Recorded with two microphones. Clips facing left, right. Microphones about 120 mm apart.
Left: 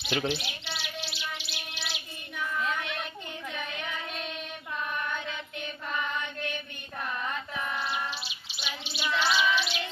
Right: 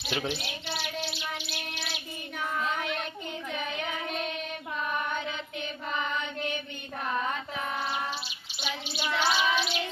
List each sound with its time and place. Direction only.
0.1 s speech: 5° right (ahead or behind)
0.9 s music: 50° right (ahead or behind)
8.9 s child singing: 45° right (ahead or behind)